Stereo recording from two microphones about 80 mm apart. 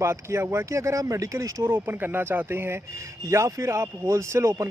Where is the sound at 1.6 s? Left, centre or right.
Right.